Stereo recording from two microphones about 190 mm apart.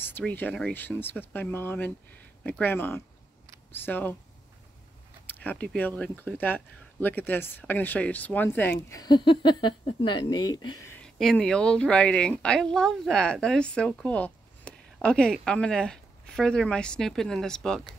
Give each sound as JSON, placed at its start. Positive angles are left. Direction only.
{"t": 0.0, "sound": "speech", "side_deg": 10}
{"t": 5.2, "sound": "speech", "side_deg": 10}
{"t": 11.0, "sound": "speech", "side_deg": 0}